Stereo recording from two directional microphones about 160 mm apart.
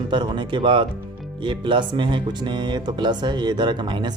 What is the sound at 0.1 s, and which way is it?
Speech, 30° right (ahead or behind).